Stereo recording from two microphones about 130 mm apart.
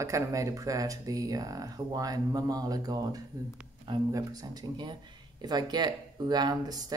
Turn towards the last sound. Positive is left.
turn(degrees=-30)  # may be behind; listen again after turning